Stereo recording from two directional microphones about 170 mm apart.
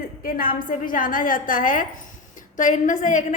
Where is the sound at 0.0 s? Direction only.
60° left (ahead or behind).